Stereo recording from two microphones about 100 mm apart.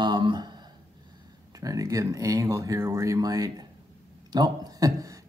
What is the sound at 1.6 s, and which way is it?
A man's voice, 35° right (ahead or behind).